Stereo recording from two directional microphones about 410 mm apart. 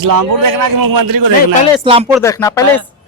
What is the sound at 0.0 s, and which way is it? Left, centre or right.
A man's voice, right.